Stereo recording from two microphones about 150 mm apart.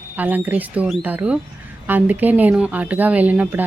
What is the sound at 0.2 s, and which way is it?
Speech, 10° right (ahead or behind).